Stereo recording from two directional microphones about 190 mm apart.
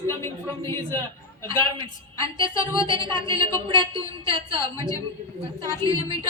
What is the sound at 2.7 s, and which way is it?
Speech, 25° right (ahead or behind).